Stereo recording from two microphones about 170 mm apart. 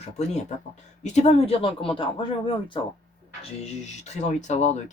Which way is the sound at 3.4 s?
40° left (ahead or behind).